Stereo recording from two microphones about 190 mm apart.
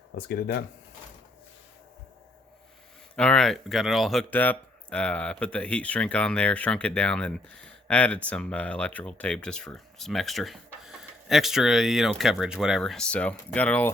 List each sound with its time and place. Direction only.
0.3 s speech: 60° left (ahead or behind)
3.2 s speech: 5° left (ahead or behind)